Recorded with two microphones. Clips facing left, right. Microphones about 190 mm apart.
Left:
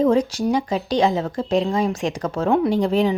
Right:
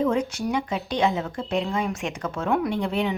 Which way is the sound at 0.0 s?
35° left (ahead or behind).